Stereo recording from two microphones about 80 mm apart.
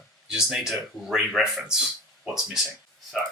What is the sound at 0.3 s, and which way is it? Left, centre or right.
Speech, centre.